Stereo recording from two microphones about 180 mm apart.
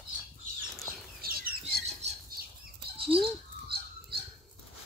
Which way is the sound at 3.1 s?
30° right (ahead or behind).